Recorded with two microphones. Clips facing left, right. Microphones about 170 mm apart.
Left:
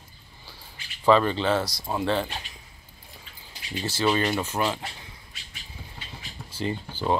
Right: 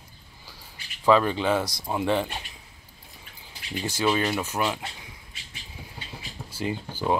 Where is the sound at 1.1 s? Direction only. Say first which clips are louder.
Even; 5° right (ahead or behind).